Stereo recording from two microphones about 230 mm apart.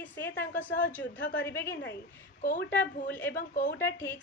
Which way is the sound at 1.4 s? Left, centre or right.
Centre.